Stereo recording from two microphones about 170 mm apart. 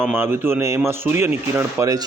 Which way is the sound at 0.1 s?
15° right (ahead or behind).